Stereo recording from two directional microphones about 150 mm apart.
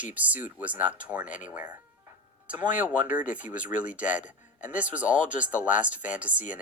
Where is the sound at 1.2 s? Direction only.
60° left (ahead or behind).